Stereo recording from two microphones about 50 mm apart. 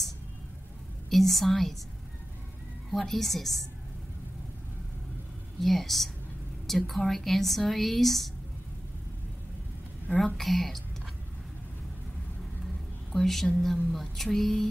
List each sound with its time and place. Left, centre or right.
1.1 s speech: centre
2.9 s speech: centre
5.6 s speech: centre
10.2 s speech: centre
13.1 s speech: centre